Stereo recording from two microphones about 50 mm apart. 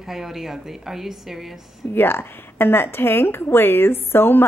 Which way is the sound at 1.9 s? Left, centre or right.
Left.